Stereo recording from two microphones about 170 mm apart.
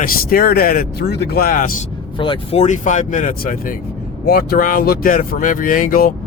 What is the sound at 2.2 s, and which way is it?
Speech, 30° left (ahead or behind).